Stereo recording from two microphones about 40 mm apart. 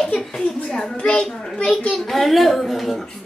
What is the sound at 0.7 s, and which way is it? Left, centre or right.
A child's voice, centre.